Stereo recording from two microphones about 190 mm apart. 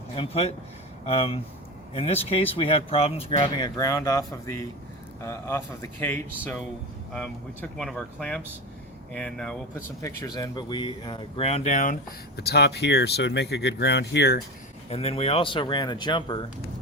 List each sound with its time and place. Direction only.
0.2 s speech: 30° left (ahead or behind); by 9.6 s 5° left (ahead or behind)
10.0 s speech: 20° left (ahead or behind); by 11.9 s 40° left (ahead or behind)
12.4 s speech: 60° left (ahead or behind)
14.8 s speech: 30° left (ahead or behind)